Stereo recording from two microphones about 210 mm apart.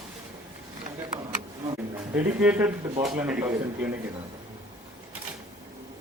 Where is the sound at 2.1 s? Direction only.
5° right (ahead or behind).